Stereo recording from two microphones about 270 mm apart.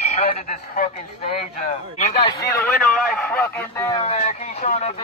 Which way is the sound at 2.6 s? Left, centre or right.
Centre.